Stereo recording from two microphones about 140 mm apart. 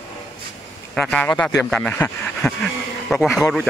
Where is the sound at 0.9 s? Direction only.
5° left (ahead or behind).